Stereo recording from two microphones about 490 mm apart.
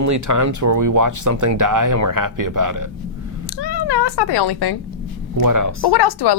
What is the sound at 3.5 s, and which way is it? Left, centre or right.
Speech, left.